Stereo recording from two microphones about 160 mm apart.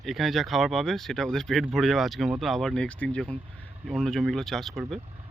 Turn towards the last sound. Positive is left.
turn(degrees=0)  # may be behind; listen again after turning